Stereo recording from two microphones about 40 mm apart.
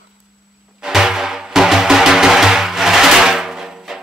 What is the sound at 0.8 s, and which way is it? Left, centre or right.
Music, centre.